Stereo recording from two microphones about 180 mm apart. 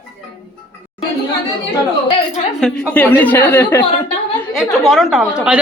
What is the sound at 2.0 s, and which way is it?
Speech, 30° left (ahead or behind).